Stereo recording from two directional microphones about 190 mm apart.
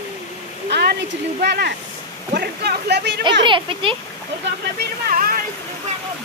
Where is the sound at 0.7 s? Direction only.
65° right (ahead or behind).